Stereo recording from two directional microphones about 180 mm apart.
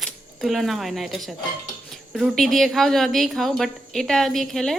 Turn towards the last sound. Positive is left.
turn(degrees=0)  # may be behind; listen again after turning